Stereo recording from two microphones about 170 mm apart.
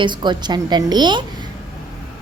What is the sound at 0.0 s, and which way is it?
Speech, 25° right (ahead or behind).